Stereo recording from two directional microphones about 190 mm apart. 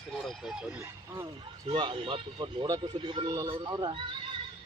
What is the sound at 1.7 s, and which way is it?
Speech, 30° right (ahead or behind).